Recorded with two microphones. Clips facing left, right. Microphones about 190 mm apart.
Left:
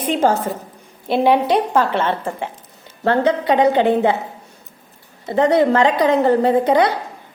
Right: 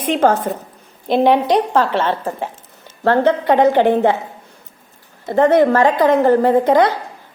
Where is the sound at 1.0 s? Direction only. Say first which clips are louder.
Right 2 dB; 5° left (ahead or behind).